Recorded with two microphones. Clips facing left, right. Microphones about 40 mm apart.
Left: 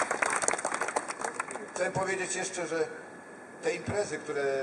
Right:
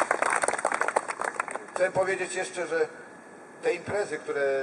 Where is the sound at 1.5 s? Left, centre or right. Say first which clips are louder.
Right 6 dB; centre.